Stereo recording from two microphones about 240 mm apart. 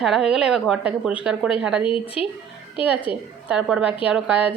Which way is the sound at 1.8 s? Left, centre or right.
Left.